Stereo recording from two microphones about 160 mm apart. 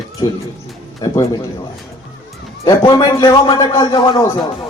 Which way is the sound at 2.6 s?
25° left (ahead or behind).